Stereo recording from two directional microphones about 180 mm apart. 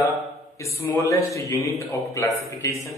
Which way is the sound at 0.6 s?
15° left (ahead or behind).